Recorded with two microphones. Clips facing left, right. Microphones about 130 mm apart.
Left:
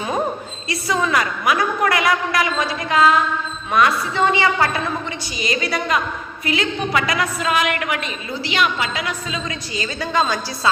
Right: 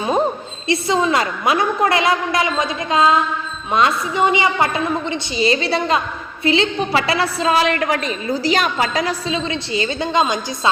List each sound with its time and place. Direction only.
0.7 s a woman's voice: 25° right (ahead or behind)